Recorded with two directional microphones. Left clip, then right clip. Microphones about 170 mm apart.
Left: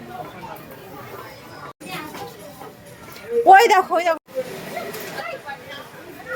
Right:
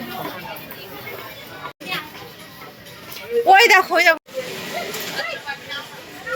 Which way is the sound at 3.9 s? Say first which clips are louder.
Right 4 dB; 5° left (ahead or behind).